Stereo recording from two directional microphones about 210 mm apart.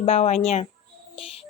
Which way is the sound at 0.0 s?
30° left (ahead or behind).